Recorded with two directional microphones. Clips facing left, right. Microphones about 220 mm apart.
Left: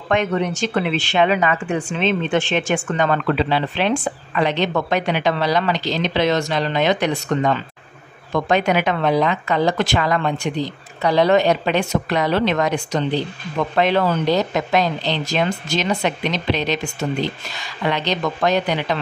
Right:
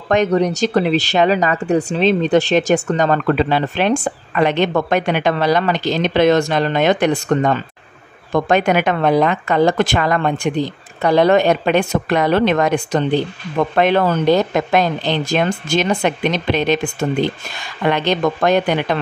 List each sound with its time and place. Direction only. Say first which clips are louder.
0.1 s a woman's voice: right 5 dB; 40° right (ahead or behind)